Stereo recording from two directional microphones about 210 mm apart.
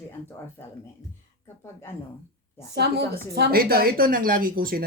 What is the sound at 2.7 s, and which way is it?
A woman's voice, 50° right (ahead or behind).